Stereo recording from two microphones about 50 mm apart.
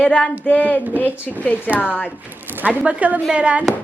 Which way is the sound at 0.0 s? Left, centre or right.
Left.